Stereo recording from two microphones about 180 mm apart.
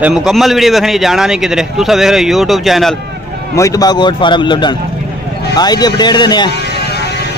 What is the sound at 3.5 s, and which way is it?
A man's voice, 20° left (ahead or behind).